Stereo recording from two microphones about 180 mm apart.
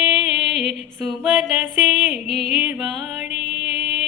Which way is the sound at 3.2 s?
40° left (ahead or behind).